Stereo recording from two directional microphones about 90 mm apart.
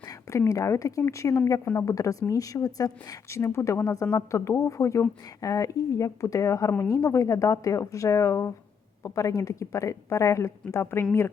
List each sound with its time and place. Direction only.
0.0 s a woman's voice: 35° left (ahead or behind)